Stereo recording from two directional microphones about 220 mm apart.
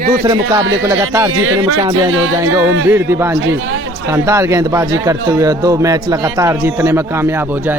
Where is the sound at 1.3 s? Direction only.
90° right.